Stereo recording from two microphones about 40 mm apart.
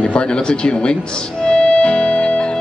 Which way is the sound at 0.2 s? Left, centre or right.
Left.